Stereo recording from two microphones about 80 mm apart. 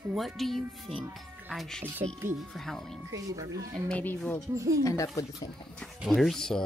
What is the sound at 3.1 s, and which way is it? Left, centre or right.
Speech, right.